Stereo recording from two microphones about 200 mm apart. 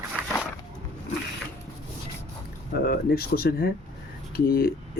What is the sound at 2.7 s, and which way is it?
Speech, 50° left (ahead or behind).